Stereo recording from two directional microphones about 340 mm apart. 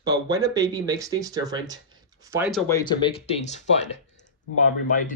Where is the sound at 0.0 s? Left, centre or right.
Centre.